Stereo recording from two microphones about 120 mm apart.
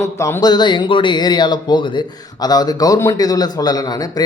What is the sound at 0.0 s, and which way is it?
Speech, 25° left (ahead or behind).